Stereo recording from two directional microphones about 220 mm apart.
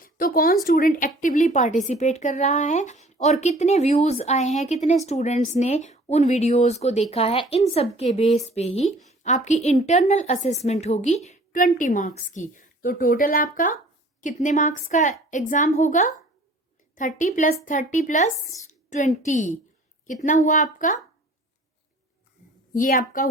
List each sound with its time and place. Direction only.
0.0 s a sound: 40° left (ahead or behind)
0.6 s a woman's voice: 40° left (ahead or behind)
22.7 s a woman's voice: 40° left (ahead or behind)